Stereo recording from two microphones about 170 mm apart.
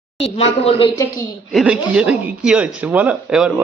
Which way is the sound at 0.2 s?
35° left (ahead or behind).